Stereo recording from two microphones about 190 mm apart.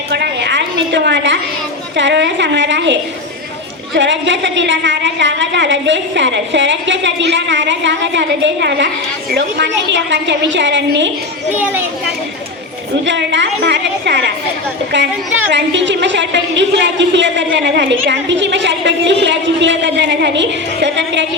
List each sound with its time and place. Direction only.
0.1 s a sound: 65° right (ahead or behind)
2.0 s a woman's voice: 70° right (ahead or behind)
11.5 s a child's voice: 10° right (ahead or behind)
13.1 s a woman's voice: 70° right (ahead or behind)
15.5 s a woman's voice: 70° right (ahead or behind)